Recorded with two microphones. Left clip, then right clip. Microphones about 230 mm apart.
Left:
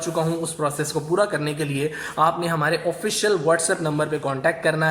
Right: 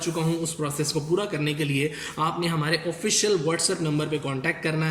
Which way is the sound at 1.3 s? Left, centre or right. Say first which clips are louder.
Left 2 dB; right.